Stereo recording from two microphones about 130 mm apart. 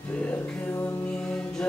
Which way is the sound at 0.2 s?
10° left (ahead or behind).